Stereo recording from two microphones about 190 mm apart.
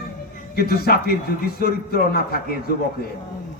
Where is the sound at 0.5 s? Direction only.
55° left (ahead or behind).